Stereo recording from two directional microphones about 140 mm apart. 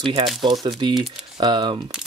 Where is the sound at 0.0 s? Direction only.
35° right (ahead or behind).